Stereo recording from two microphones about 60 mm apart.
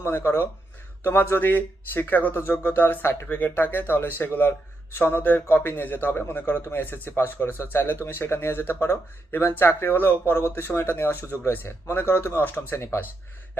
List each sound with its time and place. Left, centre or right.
0.0 s speech: left
12.5 s speech: left